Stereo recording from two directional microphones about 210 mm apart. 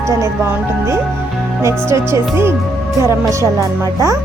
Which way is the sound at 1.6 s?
15° right (ahead or behind).